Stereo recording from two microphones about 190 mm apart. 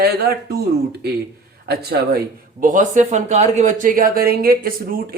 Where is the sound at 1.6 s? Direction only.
55° right (ahead or behind).